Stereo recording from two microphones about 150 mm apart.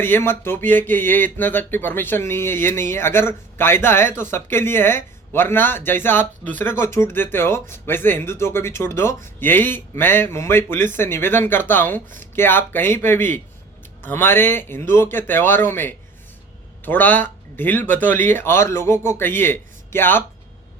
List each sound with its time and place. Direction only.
0.0 s speech: 15° left (ahead or behind)